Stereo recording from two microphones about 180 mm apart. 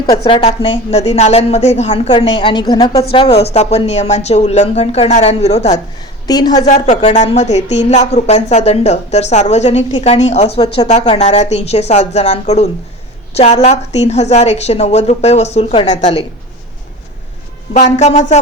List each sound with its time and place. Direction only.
0.3 s a woman's voice: 30° left (ahead or behind)
2.3 s a woman's voice: 25° left (ahead or behind)
6.2 s a woman's voice: 20° left (ahead or behind)
6.7 s a woman's voice: 45° left (ahead or behind)
17.7 s a woman's voice: 40° left (ahead or behind)